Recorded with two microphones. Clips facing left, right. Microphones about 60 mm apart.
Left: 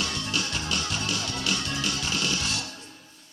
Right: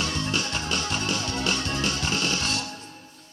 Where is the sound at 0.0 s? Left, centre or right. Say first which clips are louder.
Right 2 dB; right.